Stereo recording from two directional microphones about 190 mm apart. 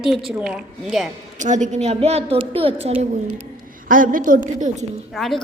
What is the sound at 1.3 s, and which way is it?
A woman's voice, 40° right (ahead or behind).